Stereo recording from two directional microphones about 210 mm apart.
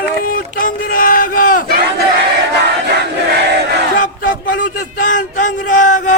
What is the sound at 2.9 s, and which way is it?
Crowd, 50° right (ahead or behind).